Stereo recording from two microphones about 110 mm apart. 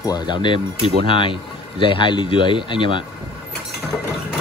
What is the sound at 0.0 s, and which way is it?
Speech, 40° left (ahead or behind).